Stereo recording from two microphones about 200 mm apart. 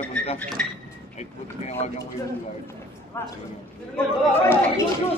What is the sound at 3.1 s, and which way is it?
Speech, 15° left (ahead or behind).